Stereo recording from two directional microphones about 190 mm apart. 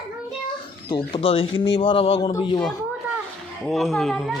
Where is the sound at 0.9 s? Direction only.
25° left (ahead or behind).